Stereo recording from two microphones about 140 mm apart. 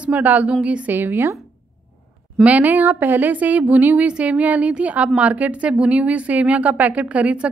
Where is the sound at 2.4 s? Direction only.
10° right (ahead or behind).